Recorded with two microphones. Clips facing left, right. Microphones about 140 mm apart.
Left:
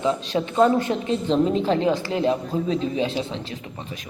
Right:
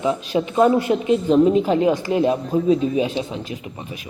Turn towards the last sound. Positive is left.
turn(degrees=-15)  # may be behind; listen again after turning